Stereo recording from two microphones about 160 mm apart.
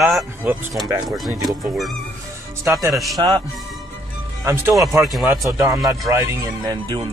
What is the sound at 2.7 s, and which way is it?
Speech, 15° right (ahead or behind).